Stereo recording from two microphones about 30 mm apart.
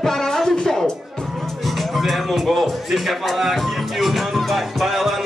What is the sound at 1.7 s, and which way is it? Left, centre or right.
Music, centre.